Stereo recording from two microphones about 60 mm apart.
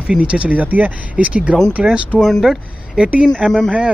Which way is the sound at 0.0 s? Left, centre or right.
Centre.